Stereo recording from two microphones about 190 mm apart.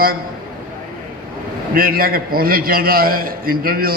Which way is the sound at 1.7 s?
50° right (ahead or behind).